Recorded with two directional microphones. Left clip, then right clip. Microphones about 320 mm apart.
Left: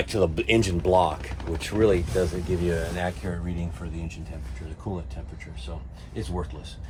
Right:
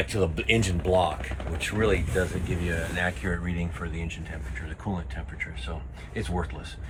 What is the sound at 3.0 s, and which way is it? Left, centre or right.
Speech, left.